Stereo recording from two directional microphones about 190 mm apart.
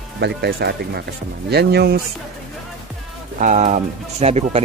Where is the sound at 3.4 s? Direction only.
40° right (ahead or behind).